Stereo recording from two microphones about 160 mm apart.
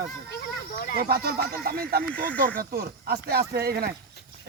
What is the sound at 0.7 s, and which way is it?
Speech, 60° left (ahead or behind).